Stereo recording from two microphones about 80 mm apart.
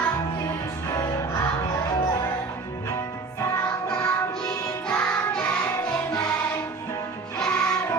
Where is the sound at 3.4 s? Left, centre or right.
Left.